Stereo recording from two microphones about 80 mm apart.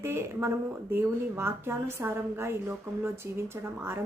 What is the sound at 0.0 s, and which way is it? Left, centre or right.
Speech, right.